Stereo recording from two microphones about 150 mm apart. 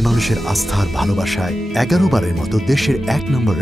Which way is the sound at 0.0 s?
Centre (ahead or behind).